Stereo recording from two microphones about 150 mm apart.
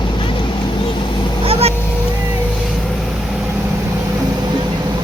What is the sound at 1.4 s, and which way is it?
Motorboat, 40° right (ahead or behind).